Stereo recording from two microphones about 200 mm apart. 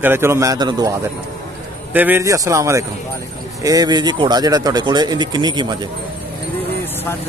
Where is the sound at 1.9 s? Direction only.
10° right (ahead or behind).